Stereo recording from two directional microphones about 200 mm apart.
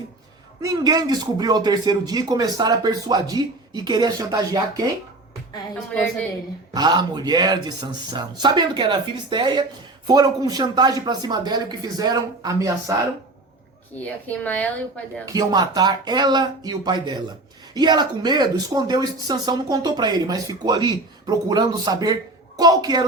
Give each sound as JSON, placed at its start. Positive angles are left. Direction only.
{"t": 0.6, "sound": "speech", "side_deg": -20}
{"t": 5.9, "sound": "speech", "side_deg": 5}
{"t": 6.7, "sound": "speech", "side_deg": -20}
{"t": 14.0, "sound": "speech", "side_deg": 10}
{"t": 15.3, "sound": "speech", "side_deg": -20}